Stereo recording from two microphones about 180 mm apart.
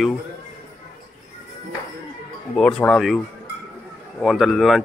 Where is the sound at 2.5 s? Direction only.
5° left (ahead or behind).